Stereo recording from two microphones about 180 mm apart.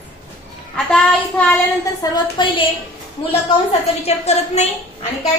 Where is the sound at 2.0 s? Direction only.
25° left (ahead or behind).